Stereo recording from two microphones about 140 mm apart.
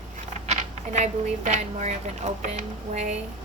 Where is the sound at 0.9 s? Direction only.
55° right (ahead or behind).